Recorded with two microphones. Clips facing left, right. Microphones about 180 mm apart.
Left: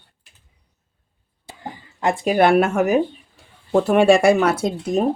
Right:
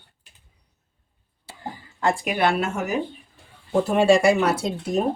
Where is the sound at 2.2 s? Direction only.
50° left (ahead or behind).